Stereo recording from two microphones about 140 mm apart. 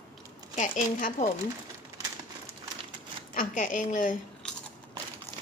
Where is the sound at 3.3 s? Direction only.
70° left (ahead or behind).